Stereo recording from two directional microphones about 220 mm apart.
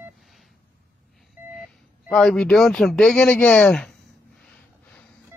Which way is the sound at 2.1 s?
5° left (ahead or behind).